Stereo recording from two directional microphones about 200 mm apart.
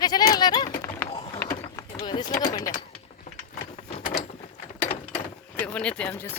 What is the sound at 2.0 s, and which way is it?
Speech, 20° left (ahead or behind).